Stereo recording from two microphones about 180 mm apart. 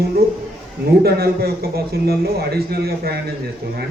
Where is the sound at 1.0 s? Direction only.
60° right (ahead or behind).